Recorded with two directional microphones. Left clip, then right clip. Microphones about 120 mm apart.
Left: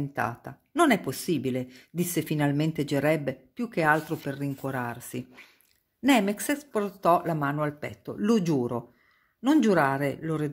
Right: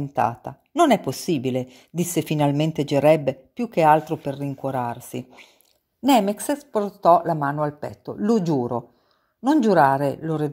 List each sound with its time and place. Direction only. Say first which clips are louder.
0.1 s a woman's voice: right 12 dB; 35° right (ahead or behind)
6.3 s a woman's voice: right 5 dB; 15° right (ahead or behind)
9.8 s a woman's voice: right 7 dB; 25° right (ahead or behind)